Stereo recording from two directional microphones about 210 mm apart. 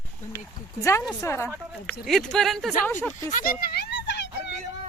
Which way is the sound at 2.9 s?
10° left (ahead or behind).